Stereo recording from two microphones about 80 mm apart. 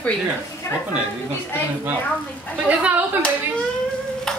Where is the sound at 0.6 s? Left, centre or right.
Left.